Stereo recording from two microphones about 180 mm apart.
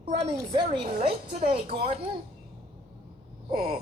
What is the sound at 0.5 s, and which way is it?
A man's voice, 30° right (ahead or behind).